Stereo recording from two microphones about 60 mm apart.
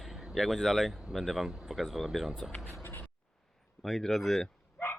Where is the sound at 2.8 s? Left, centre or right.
Left.